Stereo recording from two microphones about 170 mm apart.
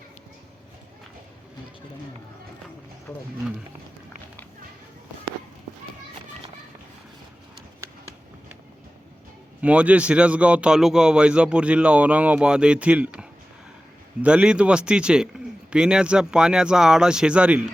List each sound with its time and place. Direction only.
3.1 s speech: 10° left (ahead or behind)
9.6 s a man's voice: 5° right (ahead or behind)